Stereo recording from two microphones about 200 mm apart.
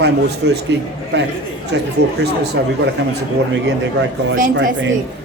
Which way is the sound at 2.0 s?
55° right (ahead or behind).